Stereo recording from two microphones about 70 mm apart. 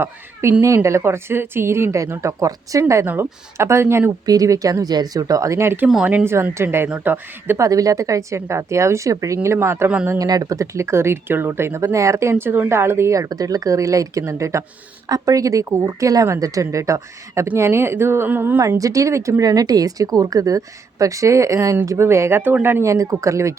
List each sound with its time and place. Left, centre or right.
0.6 s speech: right
4.3 s a woman's voice: right
7.6 s speech: right
10.2 s speech: right
15.0 s speech: right
18.8 s speech: right
19.4 s a woman's voice: right
22.9 s speech: right